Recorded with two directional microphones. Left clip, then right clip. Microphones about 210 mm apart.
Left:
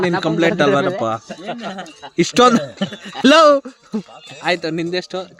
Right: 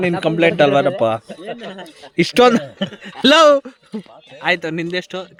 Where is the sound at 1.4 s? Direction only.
55° left (ahead or behind).